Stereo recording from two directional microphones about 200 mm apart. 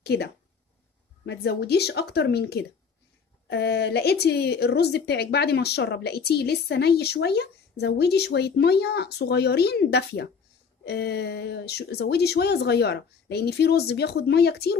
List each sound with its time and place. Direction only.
0.0 s a woman's voice: 55° left (ahead or behind)